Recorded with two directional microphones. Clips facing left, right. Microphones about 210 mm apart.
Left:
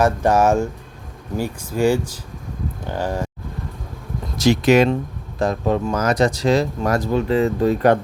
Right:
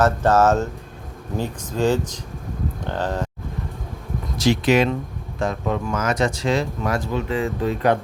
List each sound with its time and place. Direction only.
0.0 s speech: 15° left (ahead or behind)
4.4 s speech: 45° left (ahead or behind)